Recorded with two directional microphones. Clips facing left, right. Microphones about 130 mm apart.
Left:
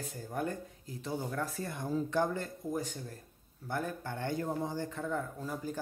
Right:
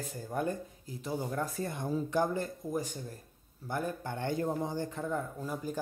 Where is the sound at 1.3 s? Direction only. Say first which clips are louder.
Right 2 dB; 20° right (ahead or behind).